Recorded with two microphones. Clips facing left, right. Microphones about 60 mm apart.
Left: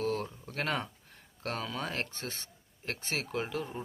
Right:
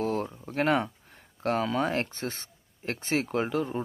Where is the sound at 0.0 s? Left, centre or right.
Right.